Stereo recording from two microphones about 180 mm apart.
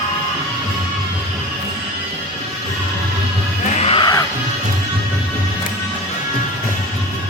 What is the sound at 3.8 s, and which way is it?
Music, 30° left (ahead or behind).